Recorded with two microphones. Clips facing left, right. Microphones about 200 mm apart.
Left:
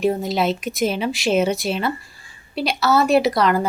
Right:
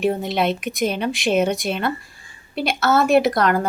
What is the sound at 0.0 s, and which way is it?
A woman's voice, centre (ahead or behind).